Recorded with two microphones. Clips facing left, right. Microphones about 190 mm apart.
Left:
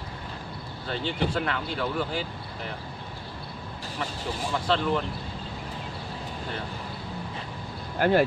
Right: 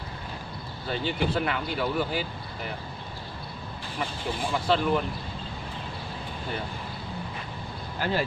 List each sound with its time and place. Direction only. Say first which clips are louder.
0.8 s speech: right 1 dB; 10° right (ahead or behind)
4.0 s speech: right 1 dB; 10° right (ahead or behind)
8.0 s speech: left 7 dB; 55° left (ahead or behind)